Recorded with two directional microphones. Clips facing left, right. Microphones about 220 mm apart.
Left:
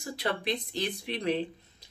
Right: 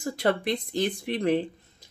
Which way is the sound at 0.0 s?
50° right (ahead or behind).